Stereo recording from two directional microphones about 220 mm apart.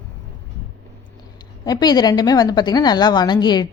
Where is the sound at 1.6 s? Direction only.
20° left (ahead or behind).